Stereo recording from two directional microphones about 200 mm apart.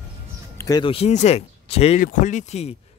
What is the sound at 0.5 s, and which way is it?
A man's voice, 20° left (ahead or behind).